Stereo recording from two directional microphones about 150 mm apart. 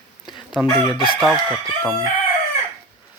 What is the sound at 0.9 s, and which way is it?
Crowing, 35° left (ahead or behind).